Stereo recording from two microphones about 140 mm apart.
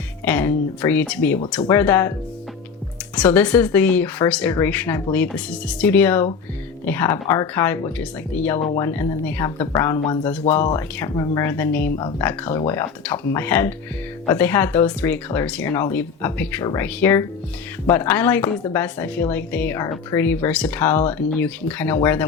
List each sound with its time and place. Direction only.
0.3 s speech: 15° left (ahead or behind)
3.2 s speech: 10° left (ahead or behind)
10.5 s speech: 55° left (ahead or behind)
11.1 s speech: 25° left (ahead or behind)
11.5 s speech: 15° left (ahead or behind)